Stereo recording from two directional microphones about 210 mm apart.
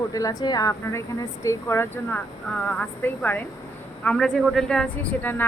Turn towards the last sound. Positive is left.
turn(degrees=10)  # may be behind; listen again after turning